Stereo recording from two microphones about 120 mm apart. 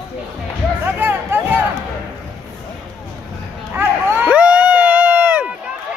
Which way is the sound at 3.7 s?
15° right (ahead or behind).